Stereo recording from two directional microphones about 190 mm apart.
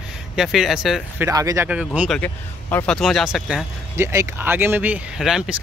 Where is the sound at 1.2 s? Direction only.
15° right (ahead or behind).